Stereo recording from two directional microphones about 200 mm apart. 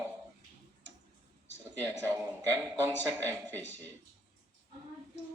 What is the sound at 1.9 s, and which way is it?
A man's voice, 15° right (ahead or behind).